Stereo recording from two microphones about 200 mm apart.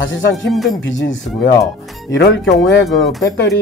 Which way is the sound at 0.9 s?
65° left (ahead or behind).